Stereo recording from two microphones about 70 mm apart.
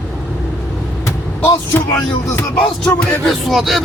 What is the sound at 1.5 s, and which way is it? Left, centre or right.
Speech, left.